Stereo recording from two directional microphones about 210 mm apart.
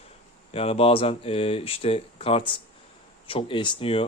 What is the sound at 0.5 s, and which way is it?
Speech, 25° left (ahead or behind).